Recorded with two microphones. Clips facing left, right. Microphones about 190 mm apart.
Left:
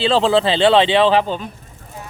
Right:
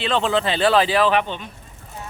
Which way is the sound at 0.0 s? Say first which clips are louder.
Left 6 dB; 30° left (ahead or behind).